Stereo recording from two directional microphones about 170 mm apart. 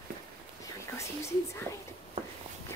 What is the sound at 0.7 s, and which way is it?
Speech, 15° left (ahead or behind).